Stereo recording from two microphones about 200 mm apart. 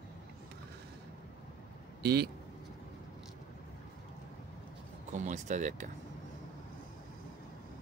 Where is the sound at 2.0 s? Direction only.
50° right (ahead or behind).